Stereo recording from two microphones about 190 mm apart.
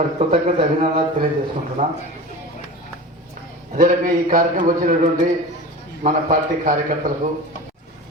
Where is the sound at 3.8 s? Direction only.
45° right (ahead or behind).